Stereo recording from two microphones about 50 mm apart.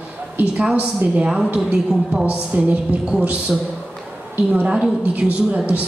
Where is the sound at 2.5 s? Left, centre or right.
Right.